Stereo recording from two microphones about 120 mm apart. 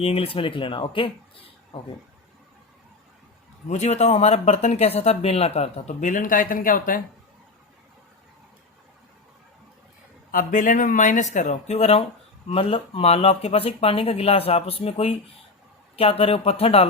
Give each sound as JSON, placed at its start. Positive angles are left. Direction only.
{"t": 0.0, "sound": "speech", "side_deg": 55}
{"t": 3.7, "sound": "speech", "side_deg": 65}
{"t": 10.5, "sound": "speech", "side_deg": 90}